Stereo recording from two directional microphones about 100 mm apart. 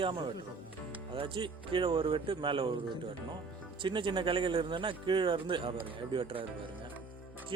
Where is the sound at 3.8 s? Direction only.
55° right (ahead or behind).